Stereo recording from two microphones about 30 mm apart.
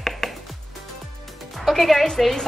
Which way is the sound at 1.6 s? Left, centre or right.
Centre.